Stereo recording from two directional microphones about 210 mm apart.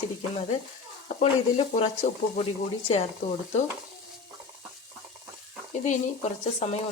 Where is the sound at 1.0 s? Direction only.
30° left (ahead or behind).